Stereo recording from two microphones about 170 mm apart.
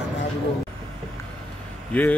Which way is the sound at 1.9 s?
10° left (ahead or behind).